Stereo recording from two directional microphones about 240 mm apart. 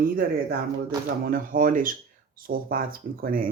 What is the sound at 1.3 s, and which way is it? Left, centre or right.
Speech, right.